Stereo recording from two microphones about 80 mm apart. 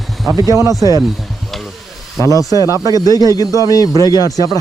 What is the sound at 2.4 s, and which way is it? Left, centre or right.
Speech, right.